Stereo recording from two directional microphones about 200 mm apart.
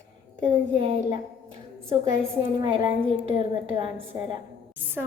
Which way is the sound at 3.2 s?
25° right (ahead or behind).